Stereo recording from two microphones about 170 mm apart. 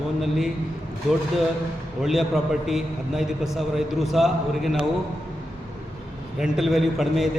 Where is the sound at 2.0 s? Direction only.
Centre (ahead or behind).